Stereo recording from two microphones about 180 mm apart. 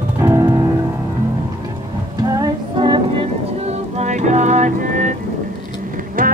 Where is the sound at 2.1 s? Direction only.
20° right (ahead or behind).